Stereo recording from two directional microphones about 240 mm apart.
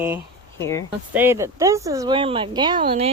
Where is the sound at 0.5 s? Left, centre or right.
Centre.